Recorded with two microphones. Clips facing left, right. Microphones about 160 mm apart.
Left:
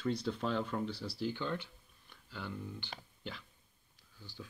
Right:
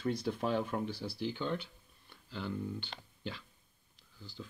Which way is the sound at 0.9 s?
55° right (ahead or behind).